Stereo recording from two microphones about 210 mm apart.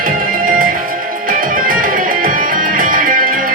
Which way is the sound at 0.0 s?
40° right (ahead or behind).